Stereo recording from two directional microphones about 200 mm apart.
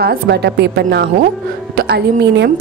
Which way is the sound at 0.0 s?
55° right (ahead or behind).